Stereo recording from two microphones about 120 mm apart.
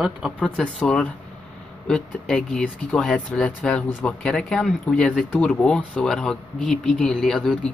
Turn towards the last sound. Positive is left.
turn(degrees=5)  # may be behind; listen again after turning